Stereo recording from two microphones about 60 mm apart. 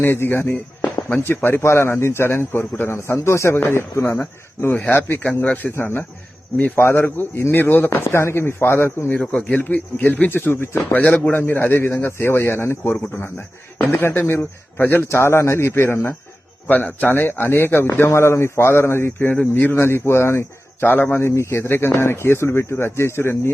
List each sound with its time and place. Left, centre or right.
0.0 s speech: left
5.2 s a man's voice: left
7.5 s speech: left
7.9 s speech: left
9.1 s a man's voice: centre
9.6 s a man's voice: left
10.3 s speech: left
10.8 s a man's voice: left
15.0 s speech: left
16.6 s speech: left
18.1 s speech: left